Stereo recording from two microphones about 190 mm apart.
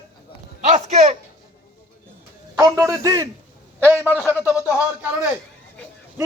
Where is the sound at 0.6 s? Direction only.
35° right (ahead or behind).